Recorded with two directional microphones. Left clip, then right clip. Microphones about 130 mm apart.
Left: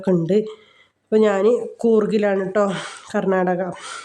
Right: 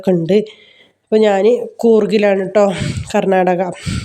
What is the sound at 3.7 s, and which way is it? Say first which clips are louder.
Speech: right 5 dB; centre (ahead or behind).